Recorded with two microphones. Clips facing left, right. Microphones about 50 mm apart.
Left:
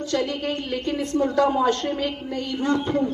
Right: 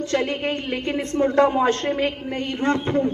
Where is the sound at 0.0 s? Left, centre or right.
Right.